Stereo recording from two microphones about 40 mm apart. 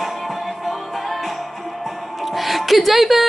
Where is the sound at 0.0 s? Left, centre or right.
Centre.